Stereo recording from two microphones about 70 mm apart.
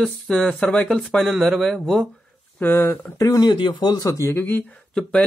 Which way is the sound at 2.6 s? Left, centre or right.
Left.